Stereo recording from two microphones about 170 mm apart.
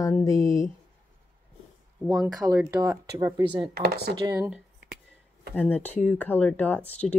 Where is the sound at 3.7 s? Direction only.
70° right (ahead or behind).